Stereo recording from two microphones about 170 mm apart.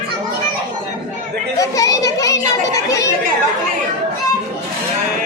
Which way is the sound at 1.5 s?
20° left (ahead or behind).